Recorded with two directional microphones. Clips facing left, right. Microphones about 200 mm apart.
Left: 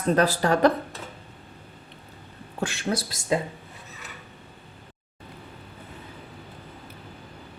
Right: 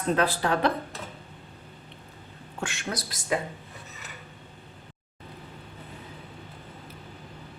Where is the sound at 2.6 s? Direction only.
35° left (ahead or behind).